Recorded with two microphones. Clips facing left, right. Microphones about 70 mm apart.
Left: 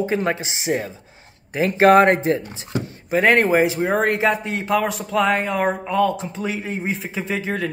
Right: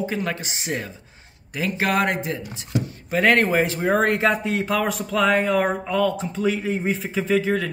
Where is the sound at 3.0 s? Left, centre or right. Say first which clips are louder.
Left 3 dB; centre.